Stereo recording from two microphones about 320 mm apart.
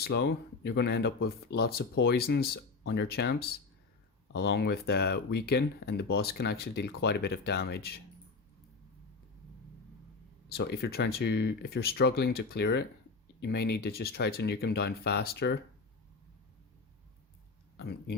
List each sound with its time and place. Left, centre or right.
0.0 s speech: left
10.6 s speech: left